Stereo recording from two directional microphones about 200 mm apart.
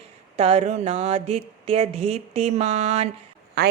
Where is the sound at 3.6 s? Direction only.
55° right (ahead or behind).